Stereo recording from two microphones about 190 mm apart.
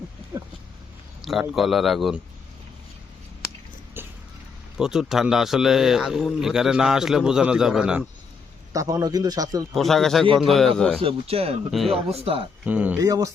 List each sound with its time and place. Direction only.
1.2 s a man's voice: centre (ahead or behind)
4.0 s a sound: 10° right (ahead or behind)
4.8 s a man's voice: 5° right (ahead or behind)
8.7 s a man's voice: 20° right (ahead or behind)
9.7 s a man's voice: centre (ahead or behind)
11.0 s speech: 30° right (ahead or behind)
11.7 s a man's voice: centre (ahead or behind)
12.1 s speech: 30° right (ahead or behind)
12.6 s speech: 10° right (ahead or behind)